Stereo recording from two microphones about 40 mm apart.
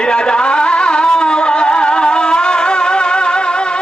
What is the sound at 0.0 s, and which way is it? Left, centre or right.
Music, left.